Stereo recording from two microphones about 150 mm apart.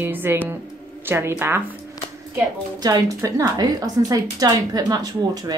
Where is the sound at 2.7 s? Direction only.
25° right (ahead or behind).